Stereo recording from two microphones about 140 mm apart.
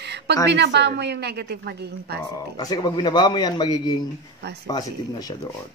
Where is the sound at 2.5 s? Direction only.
30° left (ahead or behind).